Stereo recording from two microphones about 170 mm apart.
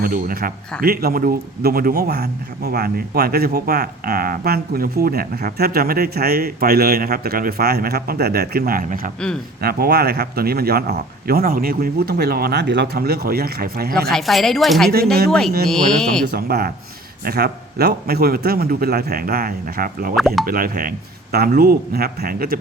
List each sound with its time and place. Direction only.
0.0 s a man's voice: 60° right (ahead or behind)
9.6 s a man's voice: 65° right (ahead or behind)
14.1 s a woman's voice: centre (ahead or behind)
16.2 s a man's voice: 70° right (ahead or behind)
20.1 s a woman's voice: centre (ahead or behind)
20.4 s a man's voice: 60° right (ahead or behind)